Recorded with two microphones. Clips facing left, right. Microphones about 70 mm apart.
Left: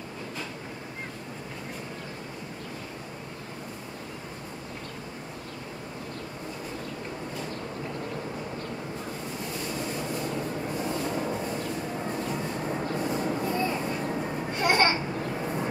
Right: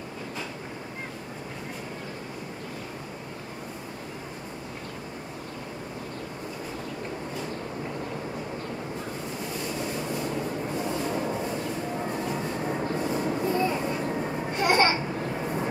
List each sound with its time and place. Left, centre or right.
9.9 s train: centre